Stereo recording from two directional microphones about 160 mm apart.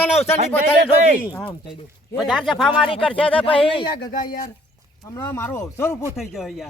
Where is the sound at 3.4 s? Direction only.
35° left (ahead or behind).